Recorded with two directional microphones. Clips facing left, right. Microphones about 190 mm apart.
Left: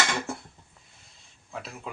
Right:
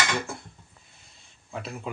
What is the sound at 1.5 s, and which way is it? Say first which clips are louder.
Speech: right 3 dB; centre (ahead or behind).